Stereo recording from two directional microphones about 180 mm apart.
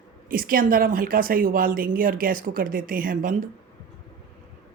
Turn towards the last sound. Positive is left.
turn(degrees=-50)  # may be behind; listen again after turning